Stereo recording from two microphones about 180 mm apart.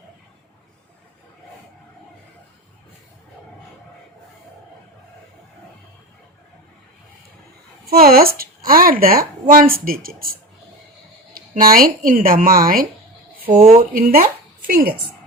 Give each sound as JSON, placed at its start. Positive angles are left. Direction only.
{"t": 7.9, "sound": "speech", "side_deg": -55}
{"t": 11.3, "sound": "speech", "side_deg": -55}
{"t": 13.9, "sound": "speech", "side_deg": -50}